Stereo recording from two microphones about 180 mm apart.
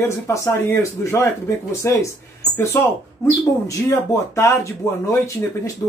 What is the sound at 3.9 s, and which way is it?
A man's voice, 15° left (ahead or behind).